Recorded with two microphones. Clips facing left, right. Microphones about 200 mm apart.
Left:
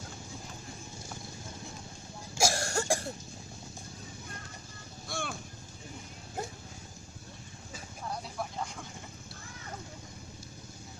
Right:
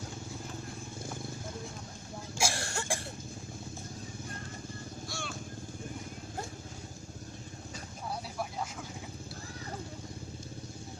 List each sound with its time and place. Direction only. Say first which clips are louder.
2.4 s cough: left 5 dB; 40° left (ahead or behind)
5.0 s vehicle: left 6 dB; 55° left (ahead or behind)
8.1 s vehicle: even; 5° right (ahead or behind)